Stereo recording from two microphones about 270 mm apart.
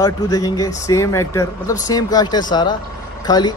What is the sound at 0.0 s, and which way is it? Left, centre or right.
Speech, centre.